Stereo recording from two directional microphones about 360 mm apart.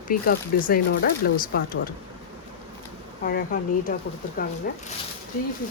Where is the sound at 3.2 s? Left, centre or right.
Left.